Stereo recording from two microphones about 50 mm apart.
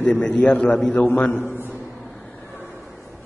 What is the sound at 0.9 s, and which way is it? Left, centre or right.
Speech, left.